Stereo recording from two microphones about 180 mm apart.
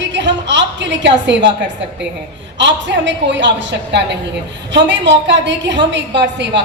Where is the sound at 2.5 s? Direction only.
80° right.